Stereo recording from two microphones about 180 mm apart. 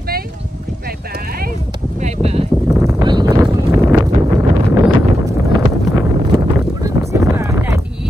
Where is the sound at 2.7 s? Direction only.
20° right (ahead or behind).